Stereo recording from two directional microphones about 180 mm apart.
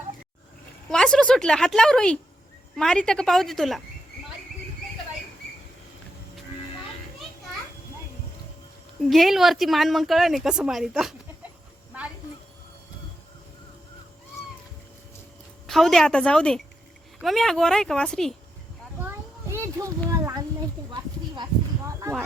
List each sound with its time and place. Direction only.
0.9 s speech: 5° left (ahead or behind)
9.0 s speech: centre (ahead or behind)
15.6 s speech: centre (ahead or behind)
19.0 s a sound: 15° right (ahead or behind)